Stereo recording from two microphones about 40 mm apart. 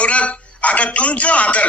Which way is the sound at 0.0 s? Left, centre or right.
Left.